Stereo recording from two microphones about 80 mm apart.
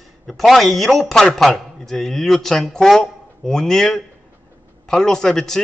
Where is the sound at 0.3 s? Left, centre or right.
Centre.